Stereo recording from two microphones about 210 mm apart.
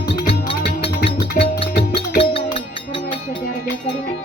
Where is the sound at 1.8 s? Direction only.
25° left (ahead or behind).